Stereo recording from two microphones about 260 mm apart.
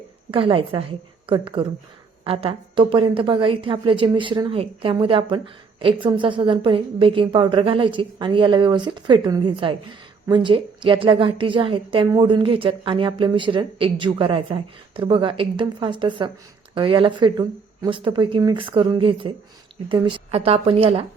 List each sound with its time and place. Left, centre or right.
0.3 s a woman's voice: centre